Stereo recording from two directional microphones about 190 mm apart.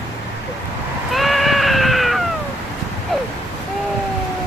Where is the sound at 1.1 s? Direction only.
Centre (ahead or behind).